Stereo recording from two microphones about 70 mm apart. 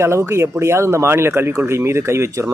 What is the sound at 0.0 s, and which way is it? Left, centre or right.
Speech, right.